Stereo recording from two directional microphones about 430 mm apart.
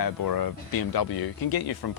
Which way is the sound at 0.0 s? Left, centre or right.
Left.